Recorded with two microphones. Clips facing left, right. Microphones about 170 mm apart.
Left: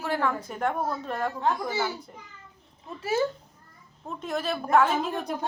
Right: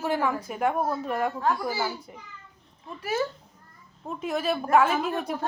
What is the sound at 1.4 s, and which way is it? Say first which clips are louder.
Speech: right 1 dB; 20° left (ahead or behind).